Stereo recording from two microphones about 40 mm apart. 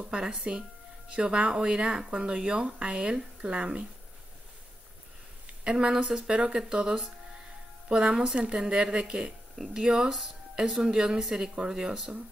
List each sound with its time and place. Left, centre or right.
0.0 s speech: centre
5.5 s a sound: right
5.9 s speech: centre